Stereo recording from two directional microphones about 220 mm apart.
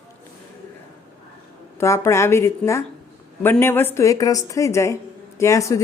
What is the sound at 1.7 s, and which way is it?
Speech, 10° left (ahead or behind).